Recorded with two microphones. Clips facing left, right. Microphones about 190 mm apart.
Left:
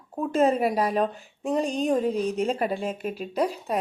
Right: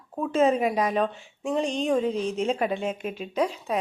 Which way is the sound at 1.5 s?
40° left (ahead or behind).